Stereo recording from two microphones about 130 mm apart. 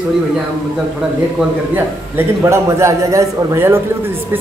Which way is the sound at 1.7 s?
20° right (ahead or behind).